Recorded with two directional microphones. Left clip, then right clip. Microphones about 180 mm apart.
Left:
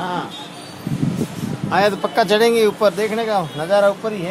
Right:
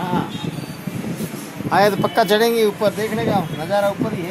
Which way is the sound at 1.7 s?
45° right (ahead or behind).